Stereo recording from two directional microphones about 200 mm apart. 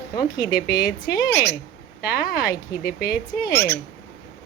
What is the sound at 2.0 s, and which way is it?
Speech, 50° left (ahead or behind).